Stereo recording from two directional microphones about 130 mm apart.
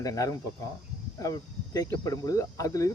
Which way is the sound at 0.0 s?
25° left (ahead or behind).